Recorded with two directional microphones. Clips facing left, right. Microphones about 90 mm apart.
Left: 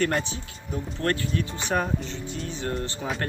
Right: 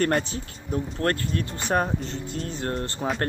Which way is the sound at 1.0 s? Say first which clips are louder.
Left 1 dB; 40° right (ahead or behind).